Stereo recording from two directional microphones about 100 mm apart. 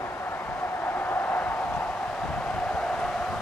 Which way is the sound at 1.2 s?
5° left (ahead or behind).